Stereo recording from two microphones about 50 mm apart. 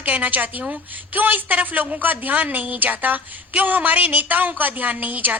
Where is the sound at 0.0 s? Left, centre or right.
Right.